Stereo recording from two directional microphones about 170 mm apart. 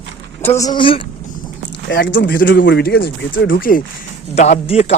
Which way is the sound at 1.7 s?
85° left.